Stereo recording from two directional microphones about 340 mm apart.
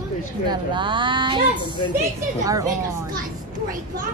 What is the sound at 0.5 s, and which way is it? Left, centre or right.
Speech, centre.